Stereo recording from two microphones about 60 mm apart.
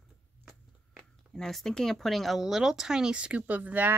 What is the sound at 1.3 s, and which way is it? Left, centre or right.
Speech, centre.